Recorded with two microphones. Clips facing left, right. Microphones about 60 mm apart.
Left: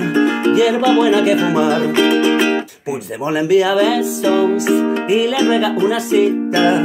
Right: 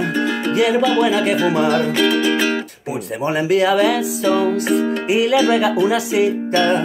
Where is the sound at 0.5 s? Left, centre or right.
Centre.